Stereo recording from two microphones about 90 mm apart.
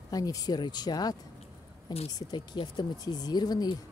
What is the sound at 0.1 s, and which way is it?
Speech, 45° left (ahead or behind).